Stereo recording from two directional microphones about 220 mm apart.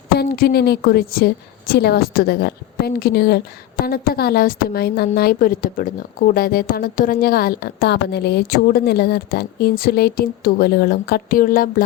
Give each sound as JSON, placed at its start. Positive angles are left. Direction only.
{"t": 0.2, "sound": "a woman's voice", "side_deg": 45}